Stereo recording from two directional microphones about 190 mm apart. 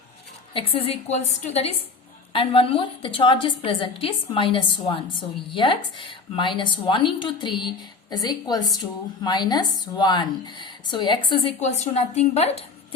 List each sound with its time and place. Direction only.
0.5 s a woman's voice: 30° left (ahead or behind)